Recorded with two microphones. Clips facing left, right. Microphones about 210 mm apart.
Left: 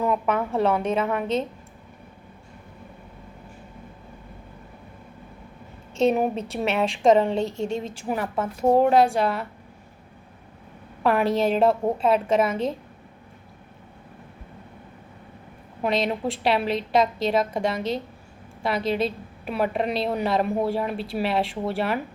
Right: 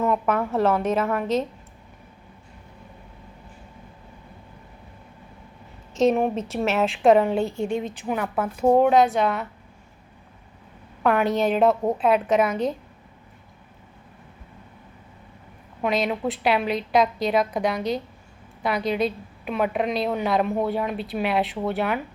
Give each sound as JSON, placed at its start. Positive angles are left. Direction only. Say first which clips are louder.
{"t": 0.0, "sound": "a woman's voice", "louder": "right 1 dB", "side_deg": 0}
{"t": 6.1, "sound": "a woman's voice", "louder": "right 1 dB", "side_deg": 0}
{"t": 7.5, "sound": "a woman's voice", "louder": "right 1 dB", "side_deg": 25}
{"t": 7.8, "sound": "a woman's voice", "louder": "right 1 dB", "side_deg": 0}
{"t": 11.0, "sound": "a woman's voice", "louder": "even", "side_deg": 0}
{"t": 15.8, "sound": "a woman's voice", "louder": "even", "side_deg": 0}